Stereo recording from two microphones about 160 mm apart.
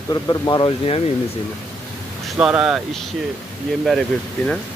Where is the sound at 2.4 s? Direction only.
5° right (ahead or behind).